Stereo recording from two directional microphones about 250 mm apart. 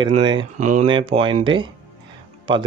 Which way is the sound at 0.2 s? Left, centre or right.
Centre.